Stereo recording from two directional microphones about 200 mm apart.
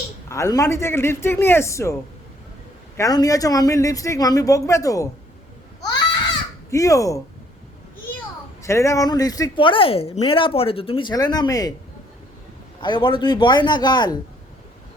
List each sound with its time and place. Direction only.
0.3 s speech: 15° left (ahead or behind)
3.0 s speech: 20° left (ahead or behind)
6.7 s speech: 15° left (ahead or behind)
8.6 s speech: 15° left (ahead or behind)
12.8 s speech: 25° left (ahead or behind)